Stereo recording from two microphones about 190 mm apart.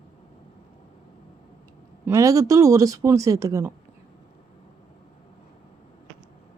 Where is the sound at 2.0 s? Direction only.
15° right (ahead or behind).